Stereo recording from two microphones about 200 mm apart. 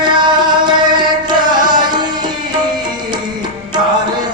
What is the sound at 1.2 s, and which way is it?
Music, 20° right (ahead or behind).